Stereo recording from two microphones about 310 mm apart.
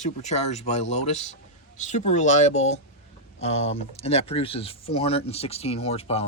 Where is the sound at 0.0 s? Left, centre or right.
Left.